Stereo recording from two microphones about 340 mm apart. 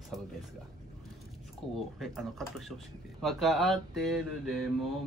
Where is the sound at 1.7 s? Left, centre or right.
Centre.